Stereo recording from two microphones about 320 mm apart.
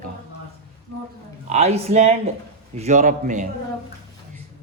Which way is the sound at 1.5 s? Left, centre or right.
Right.